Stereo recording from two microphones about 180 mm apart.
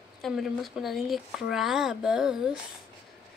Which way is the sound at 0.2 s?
Centre (ahead or behind).